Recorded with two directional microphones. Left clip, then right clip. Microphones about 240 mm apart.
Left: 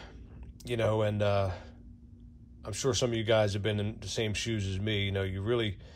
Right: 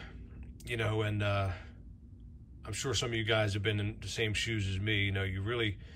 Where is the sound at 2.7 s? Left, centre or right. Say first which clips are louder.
Left 5 dB; centre.